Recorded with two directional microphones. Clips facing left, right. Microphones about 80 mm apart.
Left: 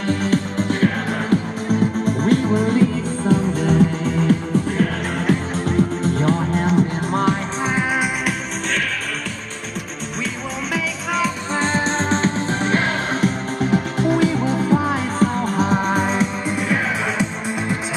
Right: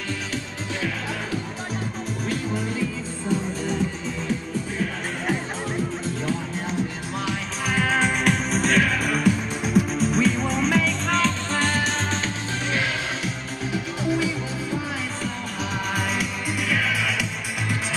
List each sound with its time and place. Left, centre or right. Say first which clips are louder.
0.2 s music: left 11 dB; left
7.6 s music: left 2 dB; left
8.6 s music: right 3 dB; centre
11.5 s music: left 4 dB; left